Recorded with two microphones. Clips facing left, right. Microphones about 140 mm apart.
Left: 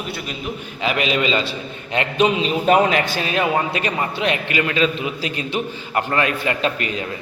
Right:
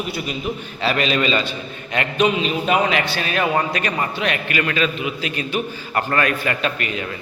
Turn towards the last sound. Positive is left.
turn(degrees=25)  # may be behind; listen again after turning